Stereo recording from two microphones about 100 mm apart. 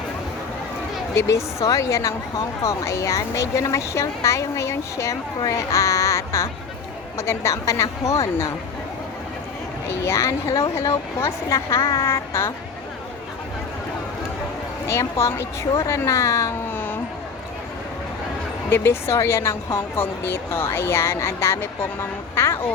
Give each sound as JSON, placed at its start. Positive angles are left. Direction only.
{"t": 1.1, "sound": "speech", "side_deg": 30}
{"t": 10.0, "sound": "a woman's voice", "side_deg": 30}
{"t": 14.8, "sound": "speech", "side_deg": 25}
{"t": 16.7, "sound": "music", "side_deg": 20}
{"t": 18.7, "sound": "a woman's voice", "side_deg": 25}